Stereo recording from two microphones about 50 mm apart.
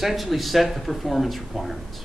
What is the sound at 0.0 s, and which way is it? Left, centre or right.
Speech, centre.